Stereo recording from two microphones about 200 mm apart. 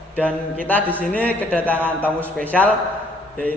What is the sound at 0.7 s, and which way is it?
A man's voice, 10° left (ahead or behind).